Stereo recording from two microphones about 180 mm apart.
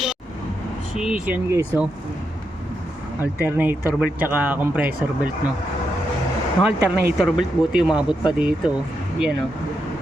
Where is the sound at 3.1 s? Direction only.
10° right (ahead or behind).